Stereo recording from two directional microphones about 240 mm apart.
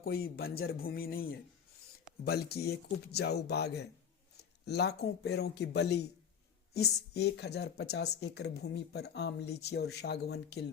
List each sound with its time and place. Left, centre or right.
0.0 s a woman's voice: left